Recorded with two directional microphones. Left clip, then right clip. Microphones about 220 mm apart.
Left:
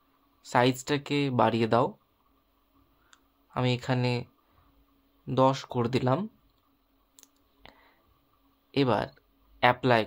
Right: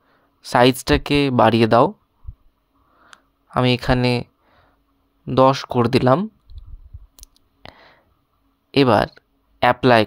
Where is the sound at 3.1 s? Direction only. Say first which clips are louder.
Right 12 dB; 40° right (ahead or behind).